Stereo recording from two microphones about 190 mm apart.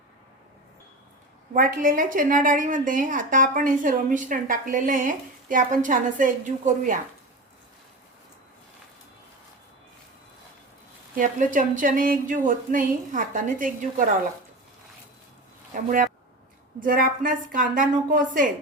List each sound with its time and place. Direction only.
1.5 s a woman's voice: 45° right (ahead or behind)
11.1 s a woman's voice: 45° right (ahead or behind)
15.7 s a woman's voice: 45° right (ahead or behind)